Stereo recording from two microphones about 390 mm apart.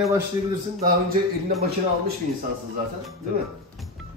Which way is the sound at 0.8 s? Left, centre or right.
Right.